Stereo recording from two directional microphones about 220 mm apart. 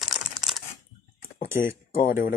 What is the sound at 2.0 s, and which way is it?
Speech, 40° left (ahead or behind).